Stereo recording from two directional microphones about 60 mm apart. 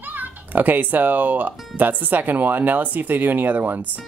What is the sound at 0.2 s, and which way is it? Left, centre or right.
Speech, right.